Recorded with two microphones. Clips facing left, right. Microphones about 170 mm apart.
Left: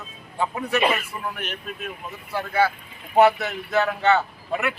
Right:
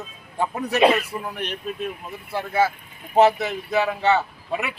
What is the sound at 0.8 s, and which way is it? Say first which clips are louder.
Speech: right 7 dB; 90° right.